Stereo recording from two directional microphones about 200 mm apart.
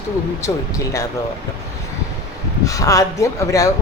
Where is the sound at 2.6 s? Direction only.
15° left (ahead or behind).